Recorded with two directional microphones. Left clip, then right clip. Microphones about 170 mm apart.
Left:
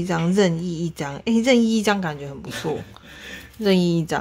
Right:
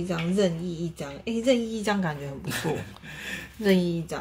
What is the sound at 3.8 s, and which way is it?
Speech, 35° left (ahead or behind).